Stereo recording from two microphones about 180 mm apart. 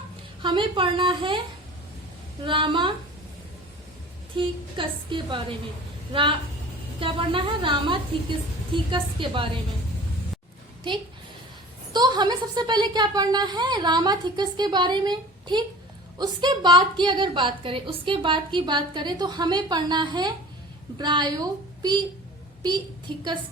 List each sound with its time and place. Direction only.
0.4 s a woman's voice: 25° right (ahead or behind)
2.4 s a woman's voice: 30° right (ahead or behind)
4.4 s a woman's voice: 30° right (ahead or behind)
11.9 s a woman's voice: 25° right (ahead or behind)